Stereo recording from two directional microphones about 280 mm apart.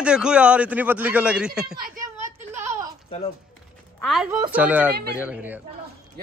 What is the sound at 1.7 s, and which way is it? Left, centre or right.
Speech, right.